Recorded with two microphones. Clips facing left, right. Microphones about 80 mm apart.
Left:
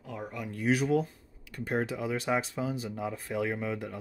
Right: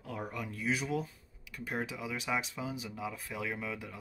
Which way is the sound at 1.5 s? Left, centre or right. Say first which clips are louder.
Left 6 dB; left.